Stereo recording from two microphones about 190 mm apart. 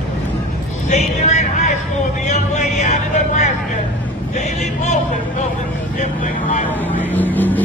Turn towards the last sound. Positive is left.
turn(degrees=10)  # may be behind; listen again after turning